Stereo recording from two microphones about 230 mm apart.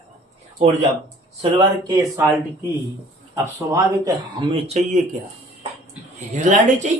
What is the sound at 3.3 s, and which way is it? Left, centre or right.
Speech, centre.